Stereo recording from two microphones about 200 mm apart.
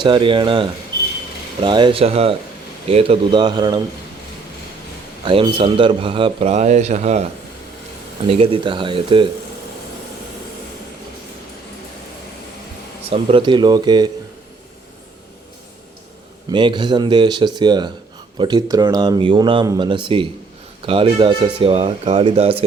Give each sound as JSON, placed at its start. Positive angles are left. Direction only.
{"t": 0.0, "sound": "a man's voice", "side_deg": -25}
{"t": 5.2, "sound": "a man's voice", "side_deg": -25}
{"t": 8.3, "sound": "a man's voice", "side_deg": -25}
{"t": 13.1, "sound": "a man's voice", "side_deg": -30}
{"t": 16.5, "sound": "a man's voice", "side_deg": -25}